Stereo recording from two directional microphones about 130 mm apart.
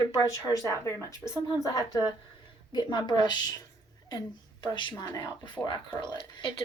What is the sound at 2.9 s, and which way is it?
Speech, 35° left (ahead or behind).